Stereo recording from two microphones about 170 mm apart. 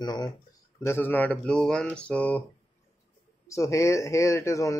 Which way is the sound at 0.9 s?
10° left (ahead or behind).